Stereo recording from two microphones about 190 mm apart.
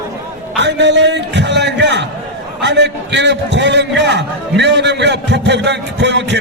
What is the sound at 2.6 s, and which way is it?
A man's voice, 65° right (ahead or behind).